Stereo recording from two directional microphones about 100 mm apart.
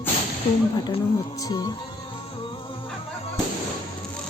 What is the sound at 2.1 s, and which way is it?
Music, 60° left (ahead or behind).